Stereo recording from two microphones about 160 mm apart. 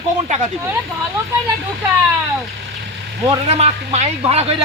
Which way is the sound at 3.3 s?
45° right (ahead or behind).